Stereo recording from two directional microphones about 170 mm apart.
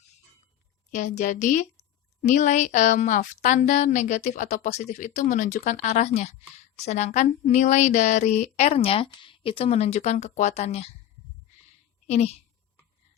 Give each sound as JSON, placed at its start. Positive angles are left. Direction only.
{"t": 0.9, "sound": "a woman's voice", "side_deg": 45}
{"t": 12.0, "sound": "speech", "side_deg": 40}